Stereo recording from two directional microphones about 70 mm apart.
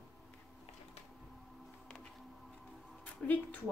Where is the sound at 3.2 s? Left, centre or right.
Left.